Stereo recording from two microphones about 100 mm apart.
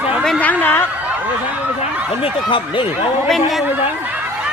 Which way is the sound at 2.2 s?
60° left (ahead or behind).